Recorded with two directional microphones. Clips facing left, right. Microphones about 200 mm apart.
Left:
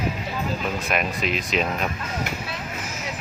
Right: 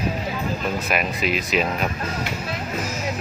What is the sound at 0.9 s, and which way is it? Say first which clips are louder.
Speech: right 1 dB; 5° right (ahead or behind).